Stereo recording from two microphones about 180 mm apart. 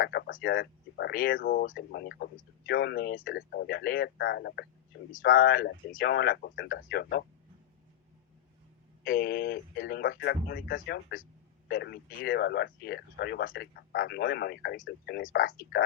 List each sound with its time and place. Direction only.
0.0 s speech: 60° left (ahead or behind)
5.2 s speech: 55° left (ahead or behind)
9.0 s speech: 55° left (ahead or behind)